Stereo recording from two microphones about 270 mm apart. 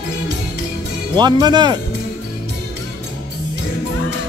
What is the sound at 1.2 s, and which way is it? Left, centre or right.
Speech, centre.